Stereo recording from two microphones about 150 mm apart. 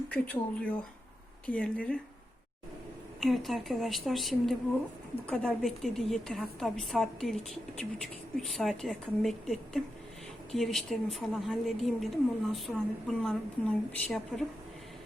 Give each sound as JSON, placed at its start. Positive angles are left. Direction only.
{"t": 0.1, "sound": "speech", "side_deg": 10}
{"t": 3.2, "sound": "a woman's voice", "side_deg": 0}